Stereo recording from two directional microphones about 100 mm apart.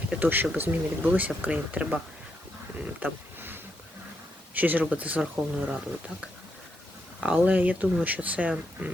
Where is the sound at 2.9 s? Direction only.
15° right (ahead or behind).